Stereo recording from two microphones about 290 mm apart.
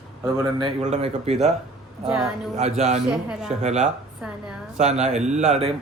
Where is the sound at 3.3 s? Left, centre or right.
Centre.